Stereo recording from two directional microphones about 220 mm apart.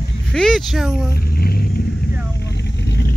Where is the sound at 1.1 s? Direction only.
45° left (ahead or behind).